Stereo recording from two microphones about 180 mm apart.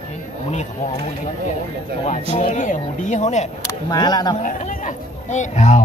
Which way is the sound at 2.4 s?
45° left (ahead or behind).